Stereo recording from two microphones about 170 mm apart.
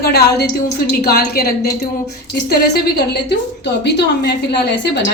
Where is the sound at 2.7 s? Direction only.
75° left (ahead or behind).